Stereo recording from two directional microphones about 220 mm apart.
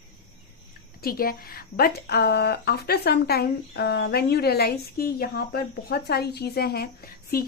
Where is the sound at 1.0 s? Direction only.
40° left (ahead or behind).